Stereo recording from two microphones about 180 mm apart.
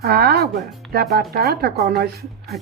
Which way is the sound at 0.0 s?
60° right (ahead or behind).